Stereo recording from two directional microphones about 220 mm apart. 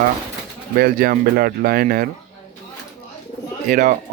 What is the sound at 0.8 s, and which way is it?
Speech, 45° right (ahead or behind).